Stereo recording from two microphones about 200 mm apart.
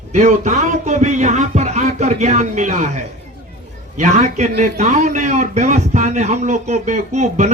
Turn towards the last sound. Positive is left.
turn(degrees=-35)  # may be behind; listen again after turning